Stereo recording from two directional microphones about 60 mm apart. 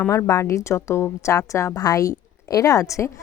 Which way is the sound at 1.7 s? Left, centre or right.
Left.